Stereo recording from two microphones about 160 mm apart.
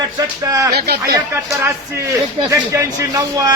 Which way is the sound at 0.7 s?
80° right.